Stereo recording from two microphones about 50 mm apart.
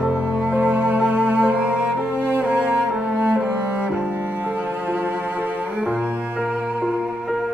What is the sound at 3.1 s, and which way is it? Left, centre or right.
Cello, centre.